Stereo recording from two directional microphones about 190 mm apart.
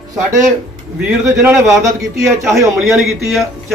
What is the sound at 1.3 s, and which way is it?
Speech, 15° right (ahead or behind).